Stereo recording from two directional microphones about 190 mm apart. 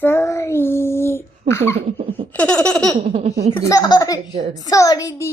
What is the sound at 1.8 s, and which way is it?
Laughter, 30° right (ahead or behind).